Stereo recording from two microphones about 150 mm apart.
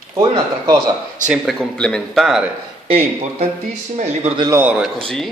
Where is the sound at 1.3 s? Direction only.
Centre (ahead or behind).